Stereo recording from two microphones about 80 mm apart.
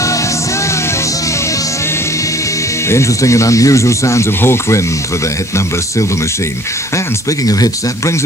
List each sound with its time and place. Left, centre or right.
2.9 s speech: left